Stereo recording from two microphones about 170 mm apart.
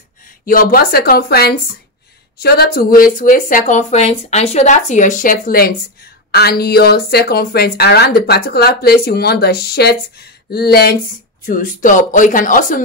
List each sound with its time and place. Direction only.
0.5 s a woman's voice: 60° left (ahead or behind)
11.4 s speech: 55° left (ahead or behind)